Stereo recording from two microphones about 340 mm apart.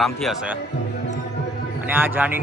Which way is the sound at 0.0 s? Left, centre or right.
Centre.